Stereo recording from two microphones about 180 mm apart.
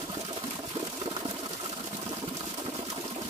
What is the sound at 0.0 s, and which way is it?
Sewing machine, 35° right (ahead or behind).